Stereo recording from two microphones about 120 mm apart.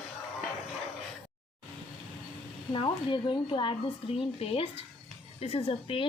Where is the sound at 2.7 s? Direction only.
45° left (ahead or behind).